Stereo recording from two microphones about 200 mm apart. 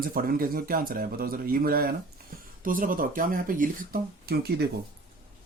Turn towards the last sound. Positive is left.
turn(degrees=-50)  # may be behind; listen again after turning